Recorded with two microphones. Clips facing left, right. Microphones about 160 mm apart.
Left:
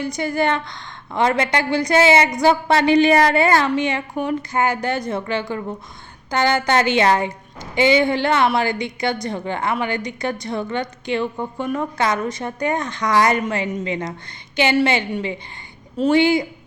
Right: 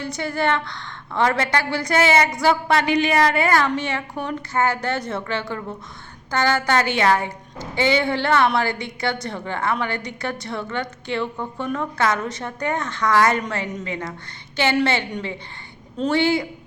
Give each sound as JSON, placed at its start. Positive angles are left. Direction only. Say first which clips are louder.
{"t": 0.0, "sound": "a woman's voice", "louder": "left 3 dB", "side_deg": 15}